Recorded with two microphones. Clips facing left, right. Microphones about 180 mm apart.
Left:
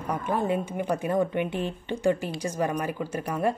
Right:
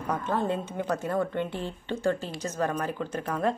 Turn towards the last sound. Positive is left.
turn(degrees=10)  # may be behind; listen again after turning